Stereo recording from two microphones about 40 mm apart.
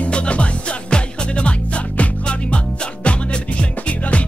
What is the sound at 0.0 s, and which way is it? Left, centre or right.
Music, left.